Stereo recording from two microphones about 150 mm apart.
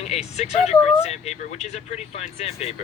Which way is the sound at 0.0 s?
45° left (ahead or behind).